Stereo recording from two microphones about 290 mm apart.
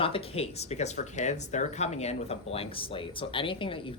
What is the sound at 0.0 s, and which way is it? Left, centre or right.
Speech, centre.